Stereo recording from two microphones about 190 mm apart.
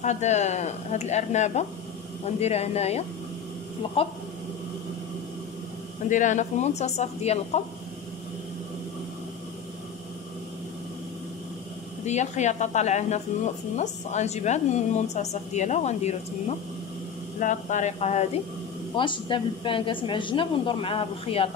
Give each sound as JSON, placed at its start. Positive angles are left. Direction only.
{"t": 0.0, "sound": "a woman's voice", "side_deg": 40}
{"t": 6.0, "sound": "a woman's voice", "side_deg": 40}
{"t": 12.0, "sound": "a woman's voice", "side_deg": 35}
{"t": 18.9, "sound": "a woman's voice", "side_deg": 25}